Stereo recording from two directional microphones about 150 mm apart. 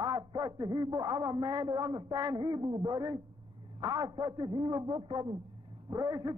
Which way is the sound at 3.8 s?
25° right (ahead or behind).